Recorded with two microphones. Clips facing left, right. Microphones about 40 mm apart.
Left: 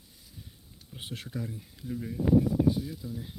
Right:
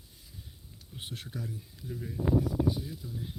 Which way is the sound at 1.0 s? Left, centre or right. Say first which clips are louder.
Left 3 dB; left.